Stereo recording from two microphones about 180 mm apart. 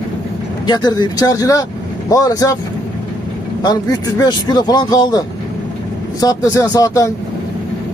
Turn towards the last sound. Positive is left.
turn(degrees=20)  # may be behind; listen again after turning